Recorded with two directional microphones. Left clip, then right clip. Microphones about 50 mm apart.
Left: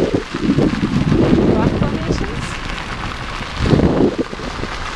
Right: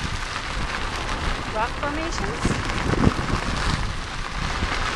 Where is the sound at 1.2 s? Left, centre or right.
Left.